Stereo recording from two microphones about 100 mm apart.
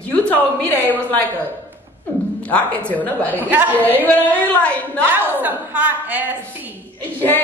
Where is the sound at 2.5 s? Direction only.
15° left (ahead or behind).